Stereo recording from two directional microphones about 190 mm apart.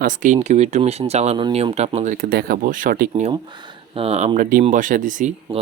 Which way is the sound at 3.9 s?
30° right (ahead or behind).